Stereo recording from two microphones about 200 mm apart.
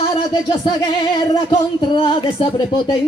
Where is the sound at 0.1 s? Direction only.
25° left (ahead or behind).